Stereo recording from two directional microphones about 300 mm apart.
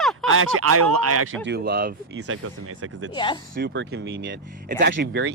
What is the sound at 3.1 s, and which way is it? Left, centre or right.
Speech, centre.